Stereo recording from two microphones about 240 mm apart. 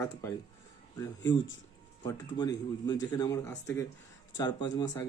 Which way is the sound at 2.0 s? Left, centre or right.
Centre.